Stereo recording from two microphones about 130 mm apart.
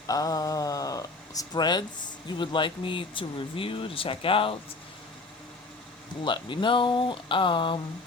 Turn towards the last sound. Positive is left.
turn(degrees=40)  # may be behind; listen again after turning